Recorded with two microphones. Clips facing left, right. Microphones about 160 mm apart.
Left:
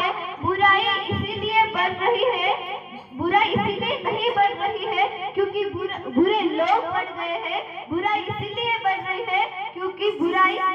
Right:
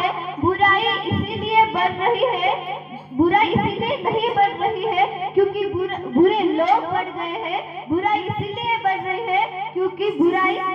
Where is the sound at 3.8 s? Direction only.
30° right (ahead or behind).